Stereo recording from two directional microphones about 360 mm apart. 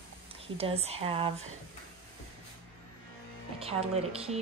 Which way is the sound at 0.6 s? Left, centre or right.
Centre.